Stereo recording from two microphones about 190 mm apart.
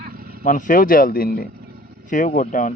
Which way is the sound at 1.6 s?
50° right (ahead or behind).